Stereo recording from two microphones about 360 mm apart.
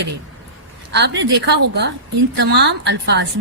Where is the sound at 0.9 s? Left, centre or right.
Right.